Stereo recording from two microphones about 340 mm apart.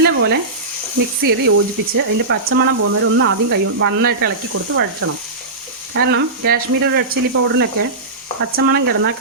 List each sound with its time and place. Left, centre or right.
0.0 s speech: right